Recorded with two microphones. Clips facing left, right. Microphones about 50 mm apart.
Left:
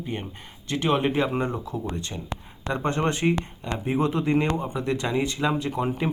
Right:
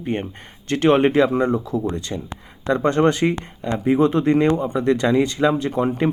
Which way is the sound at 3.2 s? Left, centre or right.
Right.